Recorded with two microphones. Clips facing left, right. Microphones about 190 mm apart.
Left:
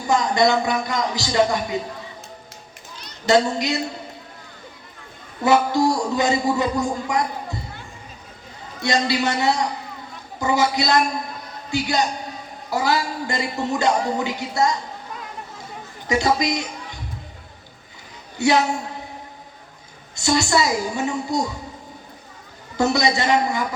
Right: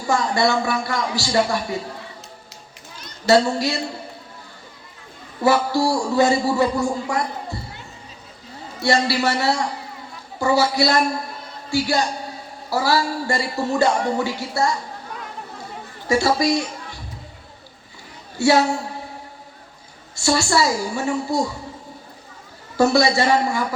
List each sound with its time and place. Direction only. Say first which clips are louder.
0.1 s a man's voice: left 1 dB; 20° left (ahead or behind)
3.2 s a man's voice: right 1 dB; 20° left (ahead or behind)
5.4 s a man's voice: left 1 dB; 20° left (ahead or behind)
8.8 s a man's voice: right 2 dB; 20° left (ahead or behind)
16.0 s a woman's voice: right 2 dB; 20° left (ahead or behind)
18.3 s a woman's voice: right 2 dB; 20° left (ahead or behind)
20.1 s a man's voice: even; 20° left (ahead or behind)
22.8 s a man's voice: right 3 dB; 20° left (ahead or behind)